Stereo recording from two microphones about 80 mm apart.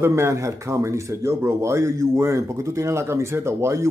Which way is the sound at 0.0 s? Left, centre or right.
Right.